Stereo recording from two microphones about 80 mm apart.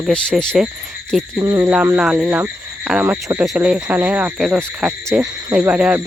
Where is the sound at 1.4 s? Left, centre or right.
Right.